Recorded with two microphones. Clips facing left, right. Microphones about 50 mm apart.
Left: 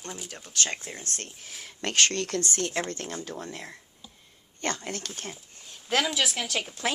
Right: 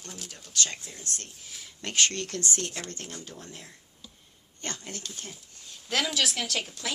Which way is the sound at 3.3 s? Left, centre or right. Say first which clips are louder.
Left 7 dB; left.